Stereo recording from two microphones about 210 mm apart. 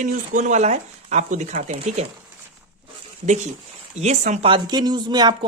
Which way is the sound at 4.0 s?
35° right (ahead or behind).